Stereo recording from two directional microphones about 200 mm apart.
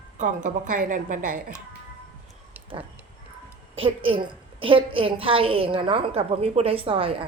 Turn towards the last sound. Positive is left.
turn(degrees=-30)  # may be behind; listen again after turning